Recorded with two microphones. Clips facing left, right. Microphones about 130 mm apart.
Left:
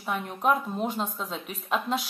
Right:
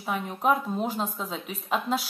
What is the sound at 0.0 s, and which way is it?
A woman's voice, centre (ahead or behind).